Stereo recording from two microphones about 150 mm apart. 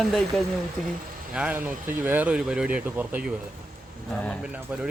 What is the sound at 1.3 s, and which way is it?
Speech, 10° right (ahead or behind).